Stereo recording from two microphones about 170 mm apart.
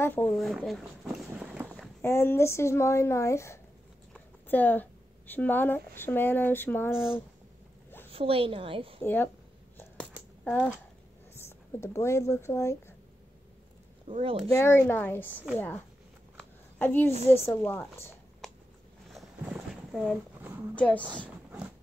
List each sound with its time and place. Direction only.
0.0 s speech: 10° left (ahead or behind)
1.7 s a woman's voice: 10° left (ahead or behind)
8.1 s a woman's voice: 35° right (ahead or behind)
9.0 s a woman's voice: 10° left (ahead or behind)
10.4 s speech: 10° left (ahead or behind)
14.0 s speech: 35° right (ahead or behind)
14.5 s a woman's voice: 15° left (ahead or behind)
16.3 s a sound: 10° left (ahead or behind)
17.3 s a woman's voice: 15° left (ahead or behind)
19.4 s boat: 5° right (ahead or behind)
20.7 s a woman's voice: 10° left (ahead or behind)
21.5 s a sound: 10° right (ahead or behind)